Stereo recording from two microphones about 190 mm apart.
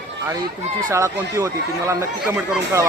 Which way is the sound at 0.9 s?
15° right (ahead or behind).